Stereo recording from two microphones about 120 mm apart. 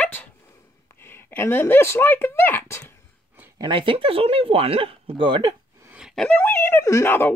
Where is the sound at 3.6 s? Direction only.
45° right (ahead or behind).